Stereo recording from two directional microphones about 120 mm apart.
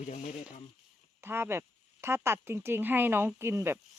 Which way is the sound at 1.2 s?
20° right (ahead or behind).